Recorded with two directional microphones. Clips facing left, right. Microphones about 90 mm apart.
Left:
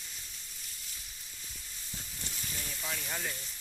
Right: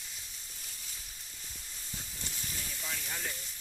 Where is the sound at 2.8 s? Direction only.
10° left (ahead or behind).